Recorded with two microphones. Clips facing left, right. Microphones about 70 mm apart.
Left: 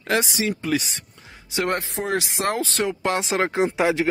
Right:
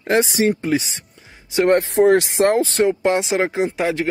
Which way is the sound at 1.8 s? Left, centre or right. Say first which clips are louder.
Right 12 dB; right.